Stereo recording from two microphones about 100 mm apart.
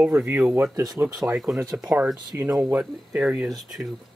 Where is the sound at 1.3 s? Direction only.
5° right (ahead or behind).